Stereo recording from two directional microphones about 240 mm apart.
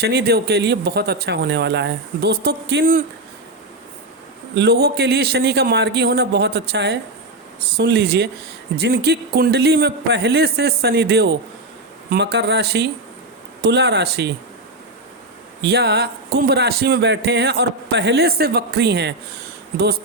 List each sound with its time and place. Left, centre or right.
0.0 s speech: right
4.5 s speech: right
15.6 s speech: right